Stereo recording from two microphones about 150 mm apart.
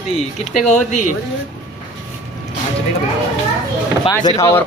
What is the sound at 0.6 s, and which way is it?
Speech, 50° left (ahead or behind).